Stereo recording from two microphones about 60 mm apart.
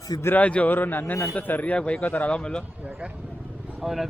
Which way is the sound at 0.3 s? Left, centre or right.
Left.